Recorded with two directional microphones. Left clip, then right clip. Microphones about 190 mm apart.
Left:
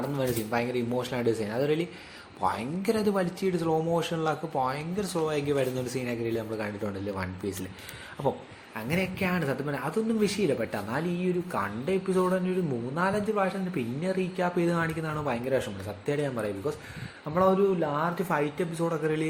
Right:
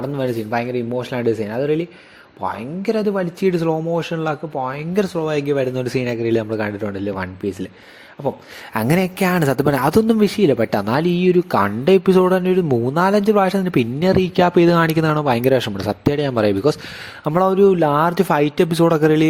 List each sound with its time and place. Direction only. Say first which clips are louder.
0.2 s a man's voice: right 8 dB; 35° right (ahead or behind)
8.7 s speech: right 12 dB; 65° right (ahead or behind); by 16.7 s 50° right (ahead or behind)
17.2 s speech: right 10 dB; 65° right (ahead or behind)